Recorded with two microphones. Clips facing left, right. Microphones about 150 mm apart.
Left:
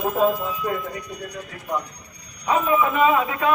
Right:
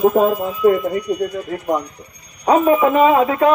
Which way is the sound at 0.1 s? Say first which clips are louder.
Right 5 dB; 60° right (ahead or behind).